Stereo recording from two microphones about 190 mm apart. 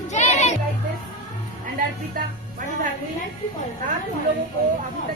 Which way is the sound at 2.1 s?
45° right (ahead or behind).